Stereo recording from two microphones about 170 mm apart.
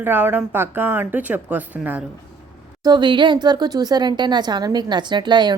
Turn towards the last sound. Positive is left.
turn(degrees=-25)  # may be behind; listen again after turning